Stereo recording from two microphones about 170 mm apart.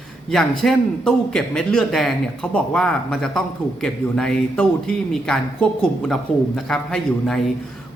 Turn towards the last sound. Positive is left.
turn(degrees=5)  # may be behind; listen again after turning